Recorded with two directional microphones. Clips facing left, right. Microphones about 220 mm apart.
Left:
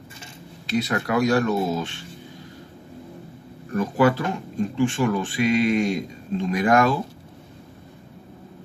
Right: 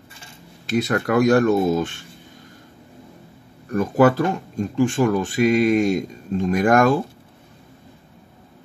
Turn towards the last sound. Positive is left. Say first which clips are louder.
# right 3 dB
turn(degrees=-50)  # may be behind; listen again after turning